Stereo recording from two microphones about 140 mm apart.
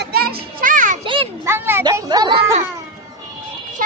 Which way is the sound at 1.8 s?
30° right (ahead or behind).